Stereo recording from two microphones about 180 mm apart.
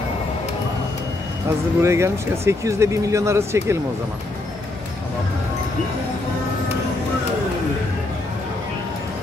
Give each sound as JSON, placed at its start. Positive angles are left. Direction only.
{"t": 1.8, "sound": "speech", "side_deg": -15}